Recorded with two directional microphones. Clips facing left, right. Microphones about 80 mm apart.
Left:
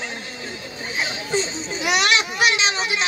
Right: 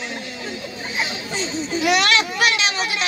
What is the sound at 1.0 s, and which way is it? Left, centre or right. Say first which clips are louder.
A child's voice: left 2 dB; left.